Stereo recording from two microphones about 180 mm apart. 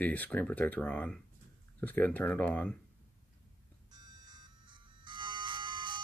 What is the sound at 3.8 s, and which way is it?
Music, 25° right (ahead or behind).